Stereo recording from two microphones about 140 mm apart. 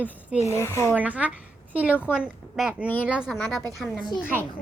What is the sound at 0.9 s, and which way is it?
A woman's voice, 10° right (ahead or behind).